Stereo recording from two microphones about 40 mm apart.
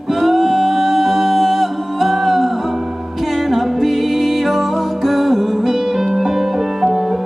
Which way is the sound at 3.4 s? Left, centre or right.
Centre.